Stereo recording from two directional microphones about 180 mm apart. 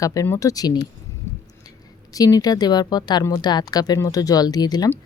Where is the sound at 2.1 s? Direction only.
20° left (ahead or behind).